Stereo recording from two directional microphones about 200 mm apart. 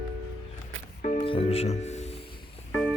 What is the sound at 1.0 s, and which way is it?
Speech, 35° left (ahead or behind).